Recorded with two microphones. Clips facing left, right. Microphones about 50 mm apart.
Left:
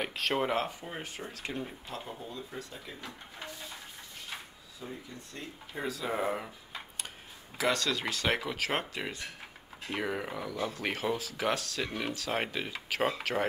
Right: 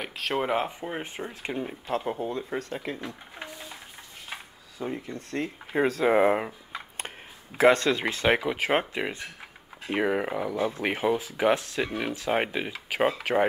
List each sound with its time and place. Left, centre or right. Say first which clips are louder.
0.0 s speech: right 2 dB; centre
0.5 s speech: right 5 dB; right
1.9 s speech: right 12 dB; right
4.7 s speech: right 10 dB; right
7.5 s speech: right 10 dB; right